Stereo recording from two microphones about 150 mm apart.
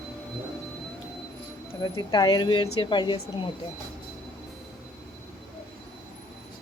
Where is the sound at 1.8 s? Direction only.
30° left (ahead or behind).